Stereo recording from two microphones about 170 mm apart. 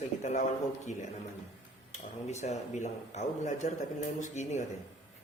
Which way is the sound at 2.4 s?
40° left (ahead or behind).